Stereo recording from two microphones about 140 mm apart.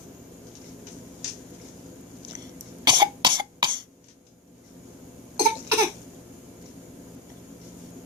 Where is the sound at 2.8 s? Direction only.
30° right (ahead or behind).